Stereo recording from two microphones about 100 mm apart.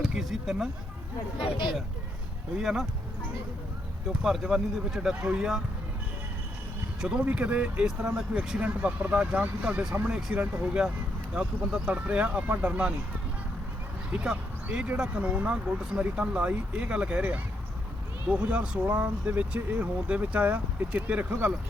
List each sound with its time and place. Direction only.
0.0 s speech: 5° right (ahead or behind)
1.4 s speech: 60° left (ahead or behind)
2.6 s speech: 5° right (ahead or behind)
4.1 s speech: 5° right (ahead or behind)
7.0 s speech: 10° right (ahead or behind)
14.1 s speech: 10° right (ahead or behind)